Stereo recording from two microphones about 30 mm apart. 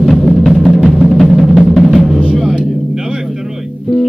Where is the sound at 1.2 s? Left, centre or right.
Centre.